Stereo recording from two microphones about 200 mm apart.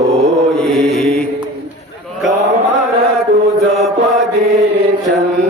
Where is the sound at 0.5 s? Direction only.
Centre (ahead or behind).